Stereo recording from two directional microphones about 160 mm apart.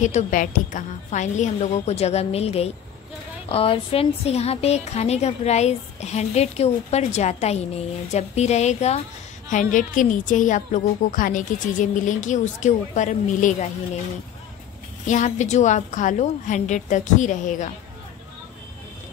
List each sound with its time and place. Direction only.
0.0 s a woman's voice: 55° left (ahead or behind)
15.0 s a woman's voice: 50° left (ahead or behind)